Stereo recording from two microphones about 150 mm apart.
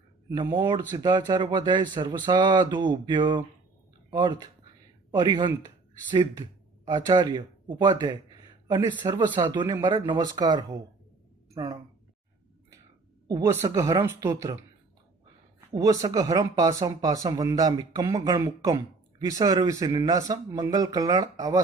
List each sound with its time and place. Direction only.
0.5 s speech: 30° right (ahead or behind)
8.1 s a sound: 25° right (ahead or behind)
9.0 s speech: 25° right (ahead or behind)
13.2 s speech: 20° right (ahead or behind)
15.7 s speech: 25° right (ahead or behind)